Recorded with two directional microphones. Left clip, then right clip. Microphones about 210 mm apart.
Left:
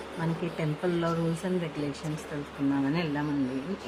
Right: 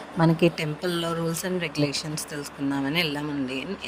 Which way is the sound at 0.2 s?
35° right (ahead or behind).